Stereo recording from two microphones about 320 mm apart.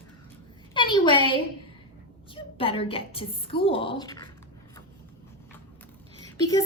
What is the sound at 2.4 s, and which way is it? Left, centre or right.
A woman's voice, centre.